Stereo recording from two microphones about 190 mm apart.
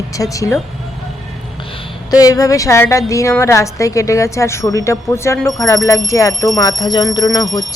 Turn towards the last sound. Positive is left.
turn(degrees=20)  # may be behind; listen again after turning